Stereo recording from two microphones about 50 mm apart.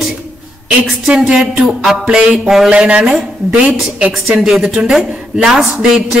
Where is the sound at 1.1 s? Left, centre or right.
Centre.